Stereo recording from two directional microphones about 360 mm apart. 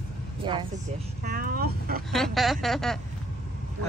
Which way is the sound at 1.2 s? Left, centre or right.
Right.